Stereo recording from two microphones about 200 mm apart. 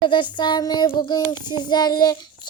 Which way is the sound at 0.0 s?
25° left (ahead or behind).